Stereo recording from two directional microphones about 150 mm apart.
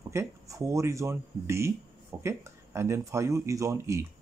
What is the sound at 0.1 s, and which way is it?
Speech, 20° right (ahead or behind).